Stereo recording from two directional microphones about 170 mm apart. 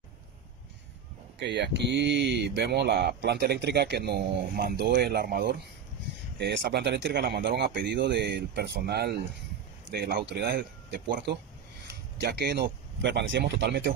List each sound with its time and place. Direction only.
1.4 s speech: 90° right